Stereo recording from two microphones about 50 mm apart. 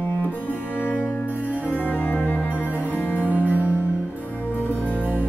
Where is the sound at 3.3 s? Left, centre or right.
Right.